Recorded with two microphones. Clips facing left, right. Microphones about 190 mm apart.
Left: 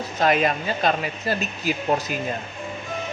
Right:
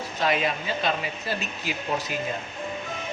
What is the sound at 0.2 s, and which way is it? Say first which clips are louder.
Speech: left 5 dB; 50° left (ahead or behind).